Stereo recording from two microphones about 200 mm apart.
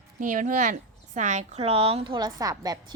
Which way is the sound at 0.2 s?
40° right (ahead or behind).